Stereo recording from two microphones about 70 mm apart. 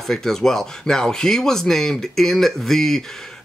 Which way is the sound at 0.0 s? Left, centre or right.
Centre.